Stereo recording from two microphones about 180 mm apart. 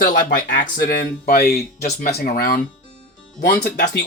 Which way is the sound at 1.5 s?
40° left (ahead or behind).